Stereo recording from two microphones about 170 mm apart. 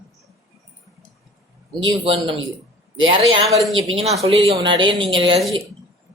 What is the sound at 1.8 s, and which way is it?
Speech, 30° right (ahead or behind).